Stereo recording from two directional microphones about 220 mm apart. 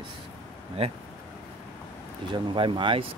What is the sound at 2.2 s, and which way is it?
Speech, 20° right (ahead or behind).